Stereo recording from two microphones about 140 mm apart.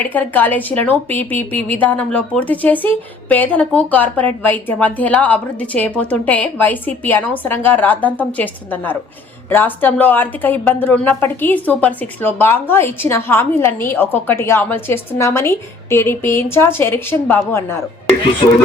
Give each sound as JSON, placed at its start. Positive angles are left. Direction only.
{"t": 0.1, "sound": "a woman's voice", "side_deg": 10}
{"t": 18.4, "sound": "speech", "side_deg": 35}